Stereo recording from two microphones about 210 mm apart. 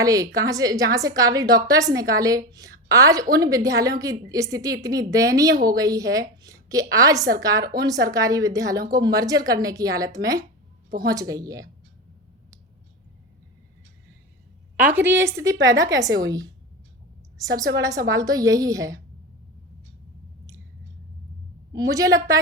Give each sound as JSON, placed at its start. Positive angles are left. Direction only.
{"t": 0.0, "sound": "a woman's voice", "side_deg": -15}
{"t": 14.8, "sound": "a woman's voice", "side_deg": -5}
{"t": 15.5, "sound": "a woman's voice", "side_deg": -60}
{"t": 15.9, "sound": "a woman's voice", "side_deg": -15}
{"t": 17.4, "sound": "a woman's voice", "side_deg": -15}
{"t": 21.7, "sound": "a woman's voice", "side_deg": -15}